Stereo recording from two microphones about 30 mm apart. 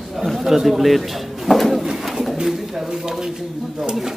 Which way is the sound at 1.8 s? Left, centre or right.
Centre.